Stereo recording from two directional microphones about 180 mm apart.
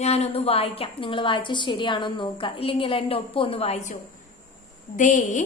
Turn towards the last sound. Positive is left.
turn(degrees=45)  # may be behind; listen again after turning